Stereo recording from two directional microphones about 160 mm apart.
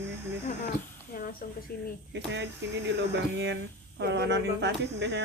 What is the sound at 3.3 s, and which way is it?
Speech, 90° right.